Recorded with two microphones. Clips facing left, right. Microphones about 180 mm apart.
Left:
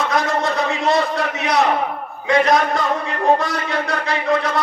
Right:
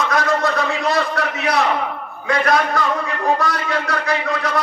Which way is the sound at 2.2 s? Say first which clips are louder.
Left 2 dB; 20° left (ahead or behind).